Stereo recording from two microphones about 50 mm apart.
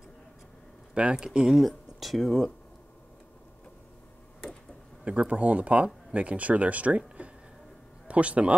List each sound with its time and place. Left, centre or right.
1.1 s speech: centre
1.6 s speech: centre
5.0 s speech: right
7.2 s a sound: right
8.1 s speech: right